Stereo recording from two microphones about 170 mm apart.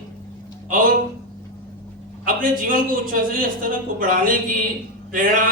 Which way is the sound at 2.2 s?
55° right (ahead or behind).